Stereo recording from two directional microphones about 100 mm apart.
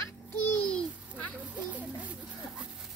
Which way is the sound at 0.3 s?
15° left (ahead or behind).